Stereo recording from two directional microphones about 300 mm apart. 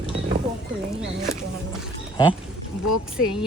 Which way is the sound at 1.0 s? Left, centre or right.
Centre.